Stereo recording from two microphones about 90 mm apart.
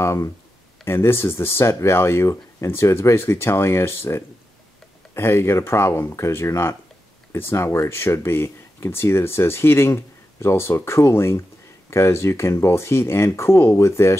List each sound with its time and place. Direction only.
0.0 s speech: 35° left (ahead or behind)